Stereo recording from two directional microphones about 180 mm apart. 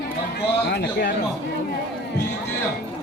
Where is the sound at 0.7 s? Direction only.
65° left (ahead or behind).